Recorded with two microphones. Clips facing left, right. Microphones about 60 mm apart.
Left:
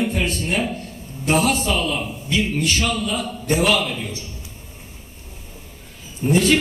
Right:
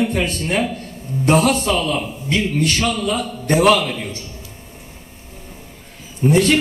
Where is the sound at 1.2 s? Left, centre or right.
Right.